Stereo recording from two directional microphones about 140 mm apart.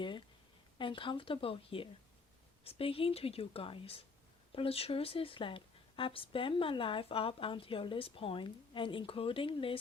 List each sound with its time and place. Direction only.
0.8 s a woman's voice: 35° left (ahead or behind)